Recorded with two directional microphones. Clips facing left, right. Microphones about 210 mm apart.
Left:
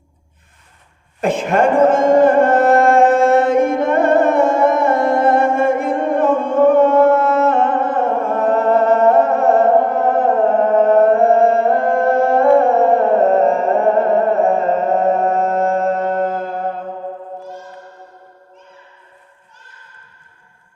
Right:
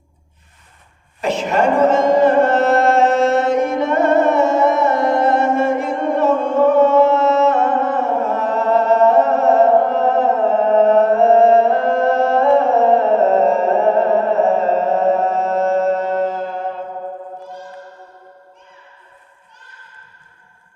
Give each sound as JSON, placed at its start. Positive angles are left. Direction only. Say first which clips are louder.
{"t": 1.2, "sound": "music", "louder": "left 2 dB", "side_deg": 50}